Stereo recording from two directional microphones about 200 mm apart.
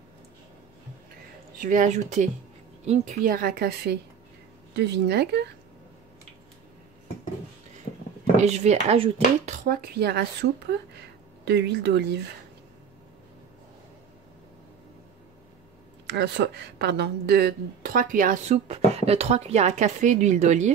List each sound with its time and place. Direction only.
1.6 s speech: 40° right (ahead or behind); by 5.5 s 55° right (ahead or behind)
8.4 s speech: 35° right (ahead or behind)
9.7 s speech: 50° right (ahead or behind)
16.1 s speech: 55° right (ahead or behind); by 20.7 s 35° right (ahead or behind)